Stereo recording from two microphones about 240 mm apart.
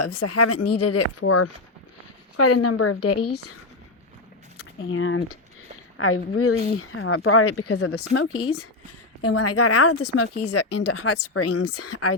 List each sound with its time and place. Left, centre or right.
0.0 s speech: left
2.3 s a woman's voice: left
4.9 s a woman's voice: left